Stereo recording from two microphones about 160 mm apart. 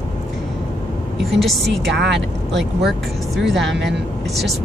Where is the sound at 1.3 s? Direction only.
Centre (ahead or behind).